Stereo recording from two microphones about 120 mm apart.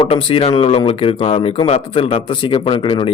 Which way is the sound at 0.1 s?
50° left (ahead or behind).